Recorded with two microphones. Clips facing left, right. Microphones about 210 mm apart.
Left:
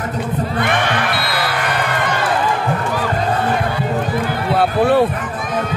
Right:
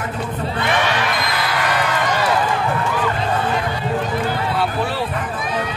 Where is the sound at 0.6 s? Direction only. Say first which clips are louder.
Even; 55° left (ahead or behind).